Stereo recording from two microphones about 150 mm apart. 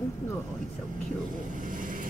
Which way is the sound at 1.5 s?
65° right (ahead or behind).